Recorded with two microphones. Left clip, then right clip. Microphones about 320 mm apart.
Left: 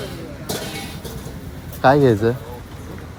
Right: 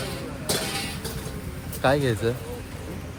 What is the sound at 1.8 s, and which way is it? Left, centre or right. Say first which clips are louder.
Speech: left 9 dB; centre.